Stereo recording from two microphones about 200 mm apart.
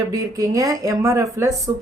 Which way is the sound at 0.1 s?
15° right (ahead or behind).